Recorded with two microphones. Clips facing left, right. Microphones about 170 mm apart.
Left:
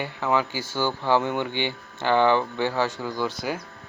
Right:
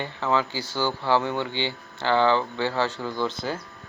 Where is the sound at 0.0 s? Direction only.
15° left (ahead or behind).